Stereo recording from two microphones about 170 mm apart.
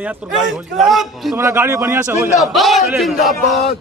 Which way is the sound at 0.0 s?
Centre (ahead or behind).